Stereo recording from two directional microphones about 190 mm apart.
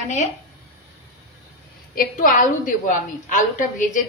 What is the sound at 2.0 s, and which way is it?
A woman's voice, 45° left (ahead or behind).